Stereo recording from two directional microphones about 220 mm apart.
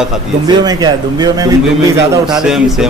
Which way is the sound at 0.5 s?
15° right (ahead or behind).